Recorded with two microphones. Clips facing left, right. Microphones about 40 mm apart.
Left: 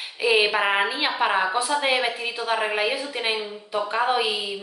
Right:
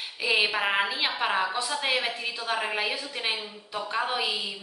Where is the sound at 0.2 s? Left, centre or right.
Centre.